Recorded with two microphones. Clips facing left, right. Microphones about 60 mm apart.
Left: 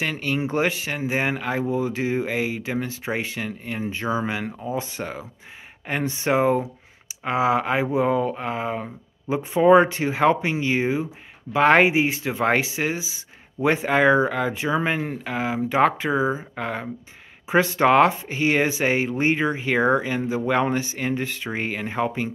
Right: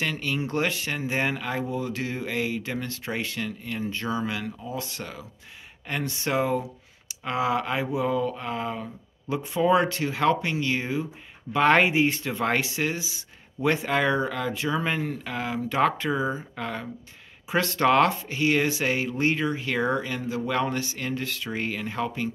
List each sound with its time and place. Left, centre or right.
0.0 s speech: centre
7.8 s speech: left